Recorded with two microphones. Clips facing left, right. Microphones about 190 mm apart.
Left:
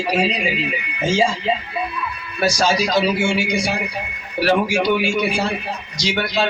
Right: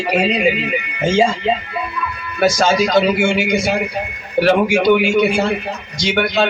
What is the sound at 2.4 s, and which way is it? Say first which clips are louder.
Speech: right 4 dB; 55° right (ahead or behind).